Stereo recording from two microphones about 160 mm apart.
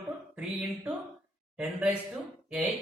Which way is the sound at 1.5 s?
5° right (ahead or behind).